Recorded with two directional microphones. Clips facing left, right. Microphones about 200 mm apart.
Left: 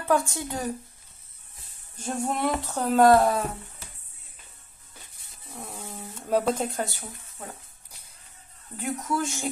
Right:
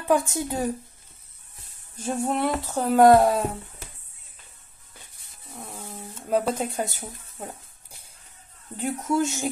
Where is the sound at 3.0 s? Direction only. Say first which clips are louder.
Right 3 dB; 25° right (ahead or behind).